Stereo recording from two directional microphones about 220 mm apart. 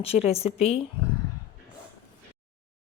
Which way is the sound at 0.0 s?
25° left (ahead or behind).